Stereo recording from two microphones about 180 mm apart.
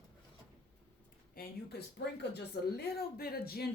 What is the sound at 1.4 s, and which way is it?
Speech, 55° left (ahead or behind).